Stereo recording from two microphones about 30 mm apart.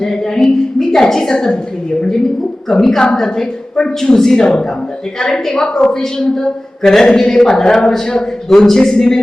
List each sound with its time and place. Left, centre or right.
0.0 s a woman's voice: centre
2.6 s a man's voice: centre
3.4 s speech: left
4.1 s a man's voice: centre